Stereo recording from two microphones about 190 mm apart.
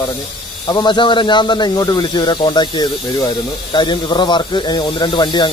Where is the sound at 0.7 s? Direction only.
25° left (ahead or behind).